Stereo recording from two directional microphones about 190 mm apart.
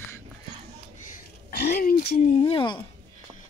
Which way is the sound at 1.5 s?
55° left (ahead or behind).